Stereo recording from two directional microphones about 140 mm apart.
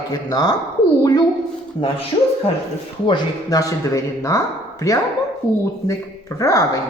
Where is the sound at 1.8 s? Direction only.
40° left (ahead or behind).